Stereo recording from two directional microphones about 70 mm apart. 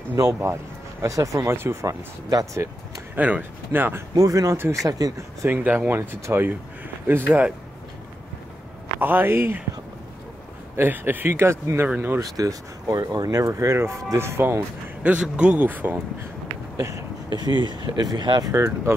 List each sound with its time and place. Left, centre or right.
1.0 s speech: right
1.4 s speech: right
2.2 s speech: right
3.2 s speech: right
4.1 s speech: right
5.5 s speech: right
9.0 s speech: right
10.8 s speech: right
12.2 s speech: right
15.0 s a man's voice: centre
15.6 s speech: right
16.7 s a sound: right
17.3 s speech: right
18.5 s speech: right